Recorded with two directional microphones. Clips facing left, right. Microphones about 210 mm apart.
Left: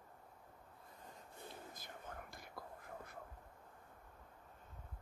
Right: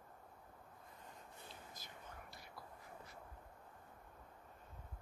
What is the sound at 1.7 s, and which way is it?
Whispering, 50° left (ahead or behind).